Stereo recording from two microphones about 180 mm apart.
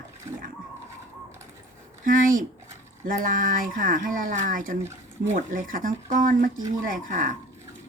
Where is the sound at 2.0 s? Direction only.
50° right (ahead or behind).